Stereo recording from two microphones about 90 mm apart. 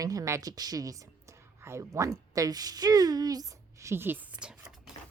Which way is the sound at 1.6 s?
30° right (ahead or behind).